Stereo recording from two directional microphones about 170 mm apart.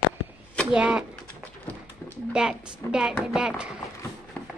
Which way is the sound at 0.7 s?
5° right (ahead or behind).